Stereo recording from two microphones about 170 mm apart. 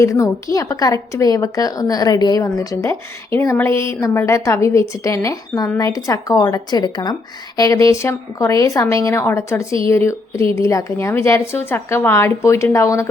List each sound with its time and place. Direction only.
0.0 s a woman's voice: 20° left (ahead or behind)